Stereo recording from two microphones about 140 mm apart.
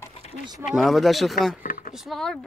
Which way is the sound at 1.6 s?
65° left (ahead or behind).